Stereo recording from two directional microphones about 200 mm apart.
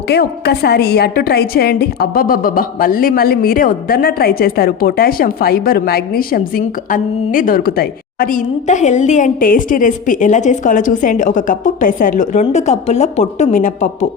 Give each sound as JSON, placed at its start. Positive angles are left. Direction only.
{"t": 0.1, "sound": "a woman's voice", "side_deg": 55}